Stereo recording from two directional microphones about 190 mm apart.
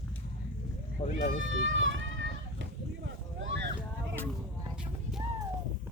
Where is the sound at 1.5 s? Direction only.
85° right.